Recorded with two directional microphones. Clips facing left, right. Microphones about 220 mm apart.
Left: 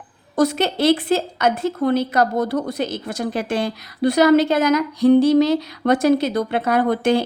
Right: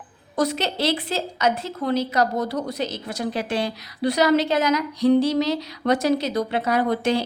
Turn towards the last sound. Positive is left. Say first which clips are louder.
# left 4 dB
turn(degrees=55)  # may be behind; listen again after turning